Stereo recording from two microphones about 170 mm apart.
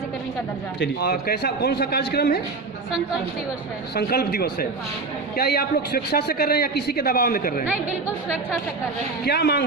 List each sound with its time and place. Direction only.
0.8 s a man's voice: 70° left (ahead or behind)
3.9 s a man's voice: 65° left (ahead or behind)
9.2 s a man's voice: 75° left (ahead or behind)